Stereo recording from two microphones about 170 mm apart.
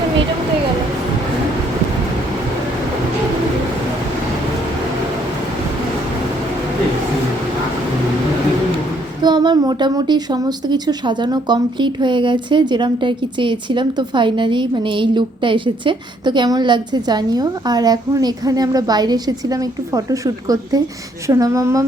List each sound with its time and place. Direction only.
9.2 s a woman's voice: 25° right (ahead or behind)